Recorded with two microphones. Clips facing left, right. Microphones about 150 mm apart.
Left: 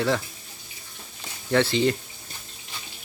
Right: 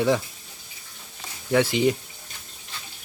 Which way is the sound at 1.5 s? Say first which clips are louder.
Right 1 dB; 10° right (ahead or behind).